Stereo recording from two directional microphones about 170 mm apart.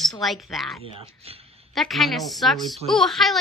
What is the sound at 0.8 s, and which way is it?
Speech, 35° right (ahead or behind).